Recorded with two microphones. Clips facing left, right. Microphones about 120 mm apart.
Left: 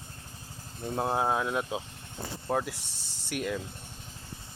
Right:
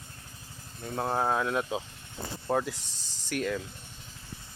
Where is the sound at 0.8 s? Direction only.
15° left (ahead or behind).